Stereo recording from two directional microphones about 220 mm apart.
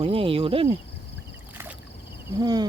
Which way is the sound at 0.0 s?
25° right (ahead or behind).